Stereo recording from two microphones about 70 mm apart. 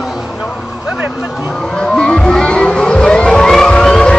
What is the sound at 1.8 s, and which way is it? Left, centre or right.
Vehicle, centre.